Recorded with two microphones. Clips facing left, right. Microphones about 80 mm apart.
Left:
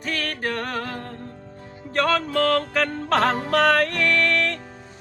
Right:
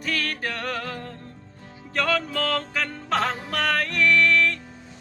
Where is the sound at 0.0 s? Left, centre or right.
Left.